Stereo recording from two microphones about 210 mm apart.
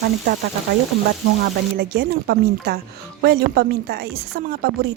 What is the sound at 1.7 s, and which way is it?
A woman's voice, 50° right (ahead or behind).